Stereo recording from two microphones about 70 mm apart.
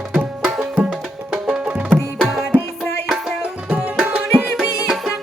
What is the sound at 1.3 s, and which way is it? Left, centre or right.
Music, centre.